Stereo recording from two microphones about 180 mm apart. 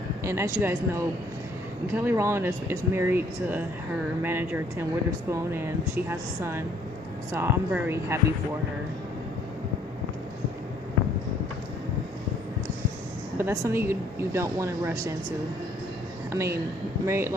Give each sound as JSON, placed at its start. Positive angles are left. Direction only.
{"t": 0.3, "sound": "speech", "side_deg": -15}
{"t": 13.4, "sound": "speech", "side_deg": -15}
{"t": 16.3, "sound": "speech", "side_deg": -15}